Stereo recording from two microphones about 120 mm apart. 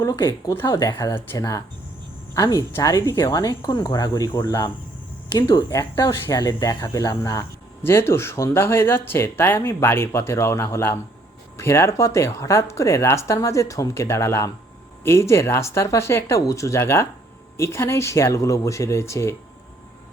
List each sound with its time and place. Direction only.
0.0 s speech: 25° left (ahead or behind)
2.3 s cricket: 30° left (ahead or behind)
2.7 s speech: 25° left (ahead or behind)